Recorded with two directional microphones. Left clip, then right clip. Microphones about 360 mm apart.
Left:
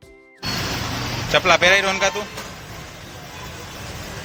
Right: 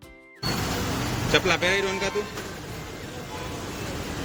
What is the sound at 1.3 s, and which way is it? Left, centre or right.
Speech, centre.